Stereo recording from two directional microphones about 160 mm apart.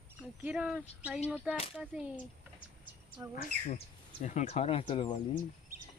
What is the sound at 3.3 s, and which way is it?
Speech, 60° left (ahead or behind).